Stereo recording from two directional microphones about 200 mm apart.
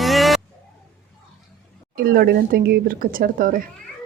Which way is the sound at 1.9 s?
50° right (ahead or behind).